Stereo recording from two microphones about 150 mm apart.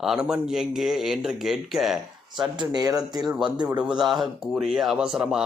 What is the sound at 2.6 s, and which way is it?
Speech, 25° right (ahead or behind).